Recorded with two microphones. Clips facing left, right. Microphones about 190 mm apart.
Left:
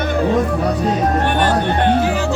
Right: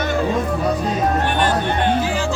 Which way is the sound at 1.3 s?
60° left (ahead or behind).